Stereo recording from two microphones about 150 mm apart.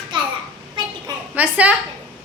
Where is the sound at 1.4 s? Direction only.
10° right (ahead or behind).